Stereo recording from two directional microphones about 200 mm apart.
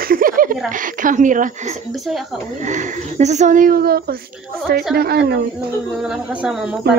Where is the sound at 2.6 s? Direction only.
35° right (ahead or behind).